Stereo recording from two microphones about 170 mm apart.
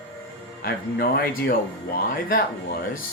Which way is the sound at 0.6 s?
65° left (ahead or behind).